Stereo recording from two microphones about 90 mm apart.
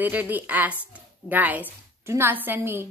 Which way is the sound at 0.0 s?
20° right (ahead or behind).